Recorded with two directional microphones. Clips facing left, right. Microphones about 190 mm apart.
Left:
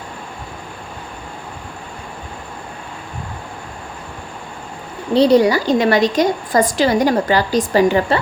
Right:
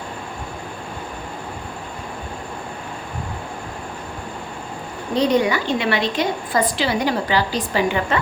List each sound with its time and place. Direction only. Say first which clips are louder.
5.1 s a woman's voice: left 6 dB; 35° left (ahead or behind)